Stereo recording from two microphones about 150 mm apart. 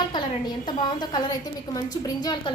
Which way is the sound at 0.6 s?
30° left (ahead or behind).